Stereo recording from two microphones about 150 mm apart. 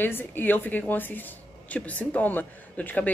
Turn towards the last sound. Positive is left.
turn(degrees=10)  # may be behind; listen again after turning